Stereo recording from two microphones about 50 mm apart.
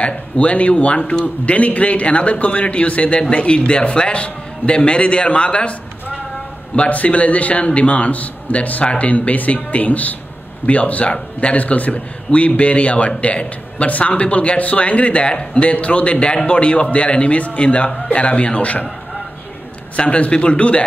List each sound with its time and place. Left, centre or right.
0.0 s speech: left
6.9 s speech: left
20.0 s speech: left